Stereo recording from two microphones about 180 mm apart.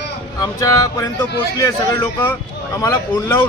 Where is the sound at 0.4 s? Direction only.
15° left (ahead or behind).